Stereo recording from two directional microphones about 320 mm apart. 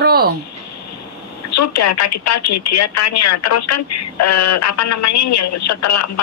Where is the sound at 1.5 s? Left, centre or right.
Left.